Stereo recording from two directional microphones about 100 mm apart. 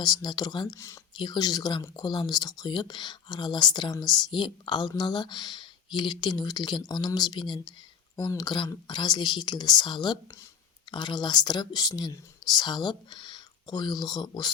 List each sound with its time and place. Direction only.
0.0 s speech: 45° left (ahead or behind)
8.1 s speech: 40° left (ahead or behind)